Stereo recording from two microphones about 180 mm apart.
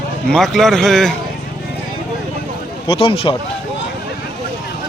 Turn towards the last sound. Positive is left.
turn(degrees=30)  # may be behind; listen again after turning